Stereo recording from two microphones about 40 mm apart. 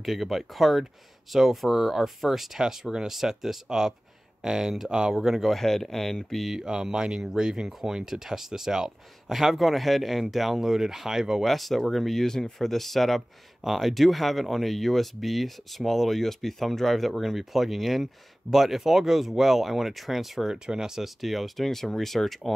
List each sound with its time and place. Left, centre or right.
0.0 s speech: centre
5.1 s speech: centre
5.5 s speech: centre
6.4 s speech: centre
11.4 s speech: centre
20.5 s speech: centre
21.2 s speech: centre